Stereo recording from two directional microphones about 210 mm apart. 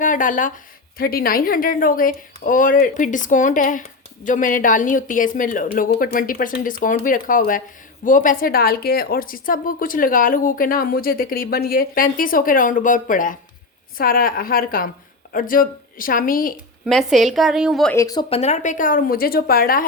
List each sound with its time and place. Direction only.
0.0 s a woman's voice: 40° left (ahead or behind)
16.8 s a woman's voice: centre (ahead or behind)
17.9 s a woman's voice: 15° left (ahead or behind); by 19.8 s 45° left (ahead or behind)